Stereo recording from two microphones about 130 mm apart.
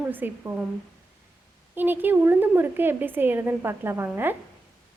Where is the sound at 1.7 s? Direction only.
15° right (ahead or behind).